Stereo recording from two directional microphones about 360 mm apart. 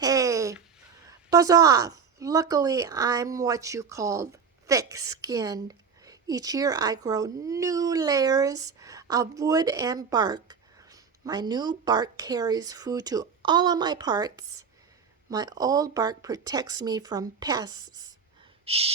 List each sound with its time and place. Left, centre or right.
0.0 s a sound: centre
1.3 s speech: centre
18.6 s gasp: centre